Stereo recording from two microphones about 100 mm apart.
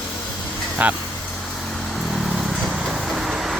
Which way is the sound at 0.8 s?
15° right (ahead or behind).